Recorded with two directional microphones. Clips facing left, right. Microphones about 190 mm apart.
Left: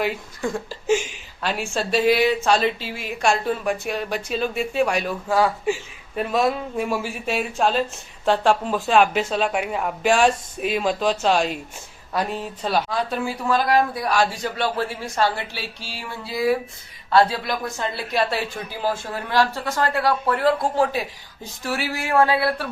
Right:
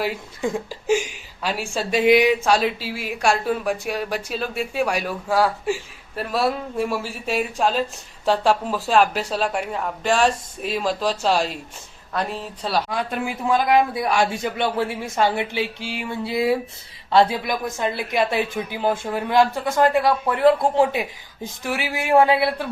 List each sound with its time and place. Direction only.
0.0 s a woman's voice: 15° right (ahead or behind)
12.9 s a woman's voice: 15° right (ahead or behind)